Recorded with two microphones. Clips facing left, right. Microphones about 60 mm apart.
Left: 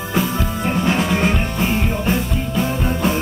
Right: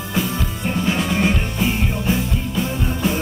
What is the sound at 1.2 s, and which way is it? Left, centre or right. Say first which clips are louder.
Music: left 1 dB; left.